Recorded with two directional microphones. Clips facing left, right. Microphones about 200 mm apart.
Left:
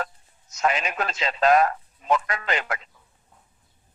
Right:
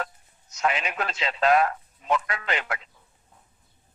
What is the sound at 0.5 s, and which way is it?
A man's voice, 40° left (ahead or behind).